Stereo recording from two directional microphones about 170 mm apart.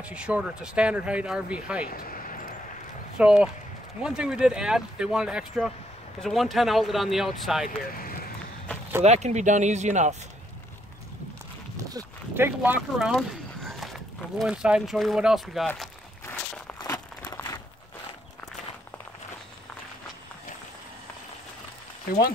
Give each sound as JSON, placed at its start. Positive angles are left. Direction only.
{"t": 0.0, "sound": "speech", "side_deg": -5}
{"t": 1.9, "sound": "vehicle", "side_deg": 60}
{"t": 3.2, "sound": "speech", "side_deg": -5}
{"t": 7.6, "sound": "speech", "side_deg": 60}
{"t": 9.0, "sound": "speech", "side_deg": -40}
{"t": 11.7, "sound": "speech", "side_deg": -20}
{"t": 13.1, "sound": "a sound", "side_deg": 0}
{"t": 14.4, "sound": "speech", "side_deg": -5}
{"t": 16.3, "sound": "walk", "side_deg": 5}
{"t": 16.8, "sound": "crumpling", "side_deg": 20}